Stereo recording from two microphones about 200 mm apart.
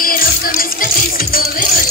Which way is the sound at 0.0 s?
45° left (ahead or behind).